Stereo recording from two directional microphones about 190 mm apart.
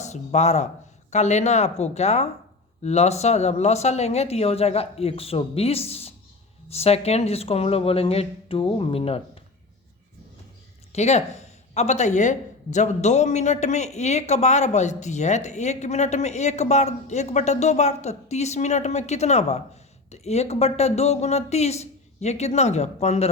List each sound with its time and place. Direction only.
0.0 s speech: 35° left (ahead or behind)
10.9 s speech: 35° left (ahead or behind)